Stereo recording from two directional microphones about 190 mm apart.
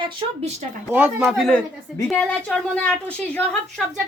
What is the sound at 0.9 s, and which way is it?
A woman's voice, 5° right (ahead or behind).